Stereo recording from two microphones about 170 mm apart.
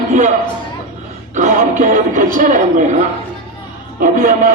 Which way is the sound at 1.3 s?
45° right (ahead or behind).